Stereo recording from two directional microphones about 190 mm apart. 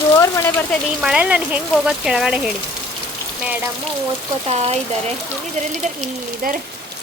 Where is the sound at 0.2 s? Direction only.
15° left (ahead or behind).